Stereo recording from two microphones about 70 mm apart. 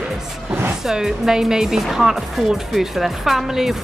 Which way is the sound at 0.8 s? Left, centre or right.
Centre.